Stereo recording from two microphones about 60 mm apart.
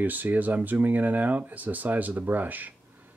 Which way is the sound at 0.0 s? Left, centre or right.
Right.